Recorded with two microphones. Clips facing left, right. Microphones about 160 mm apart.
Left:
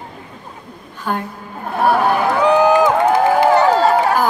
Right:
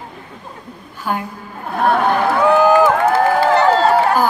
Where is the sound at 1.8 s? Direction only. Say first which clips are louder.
Even; 5° left (ahead or behind).